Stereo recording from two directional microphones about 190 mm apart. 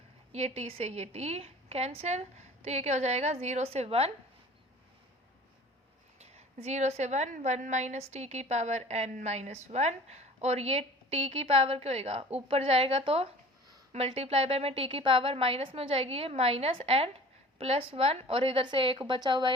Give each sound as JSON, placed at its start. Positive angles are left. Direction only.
{"t": 0.3, "sound": "a woman's voice", "side_deg": -35}
{"t": 6.1, "sound": "a woman's voice", "side_deg": -35}